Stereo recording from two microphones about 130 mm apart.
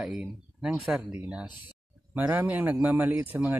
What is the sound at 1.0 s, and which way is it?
A man's voice, 20° right (ahead or behind).